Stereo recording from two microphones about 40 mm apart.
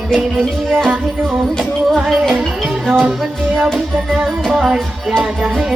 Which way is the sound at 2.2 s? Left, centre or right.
Centre.